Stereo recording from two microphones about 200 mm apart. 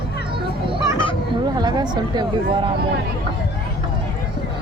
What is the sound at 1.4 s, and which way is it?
Speech, 20° right (ahead or behind).